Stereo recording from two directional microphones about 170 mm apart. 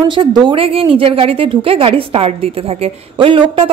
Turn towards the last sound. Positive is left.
turn(degrees=-30)  # may be behind; listen again after turning